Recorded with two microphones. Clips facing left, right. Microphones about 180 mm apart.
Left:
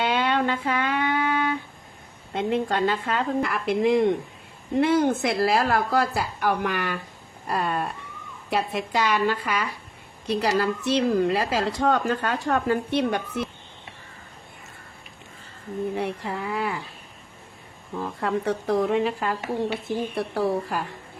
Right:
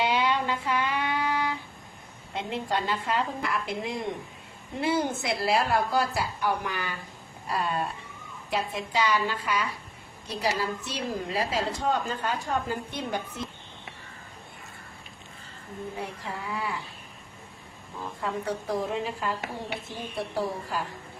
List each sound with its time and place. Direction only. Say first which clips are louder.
0.0 s music: left 3 dB; 55° left (ahead or behind)
2.3 s a woman's voice: left 6 dB; 55° left (ahead or behind); by 7.0 s 70° left (ahead or behind)
7.4 s a sound: left 3 dB; 60° left (ahead or behind)
8.4 s speech: left 4 dB; 65° left (ahead or behind)
10.2 s a woman's voice: left 6 dB; 75° left (ahead or behind)
16.0 s a woman's voice: left 7 dB; 65° left (ahead or behind)
18.2 s a woman's voice: left 5 dB; 70° left (ahead or behind)